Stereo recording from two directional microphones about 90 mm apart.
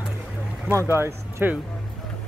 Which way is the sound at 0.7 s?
30° right (ahead or behind).